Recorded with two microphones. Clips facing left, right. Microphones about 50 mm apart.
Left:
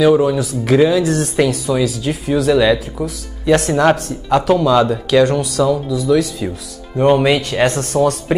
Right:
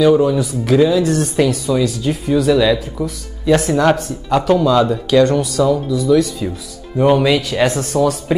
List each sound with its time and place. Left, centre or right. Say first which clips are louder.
0.0 s speech: even; centre
8.3 s speech: even; centre